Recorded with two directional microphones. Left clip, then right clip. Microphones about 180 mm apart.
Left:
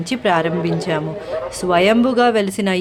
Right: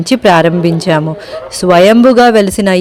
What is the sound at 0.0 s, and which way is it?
A man's voice, 45° right (ahead or behind).